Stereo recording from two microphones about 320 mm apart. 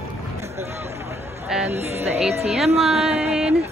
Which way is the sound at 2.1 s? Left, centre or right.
Centre.